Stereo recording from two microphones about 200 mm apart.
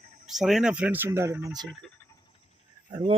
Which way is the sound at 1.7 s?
Centre (ahead or behind).